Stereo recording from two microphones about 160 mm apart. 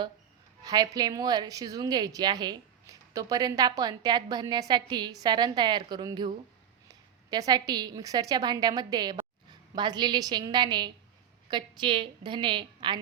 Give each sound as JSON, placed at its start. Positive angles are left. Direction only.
{"t": 0.6, "sound": "a woman's voice", "side_deg": -25}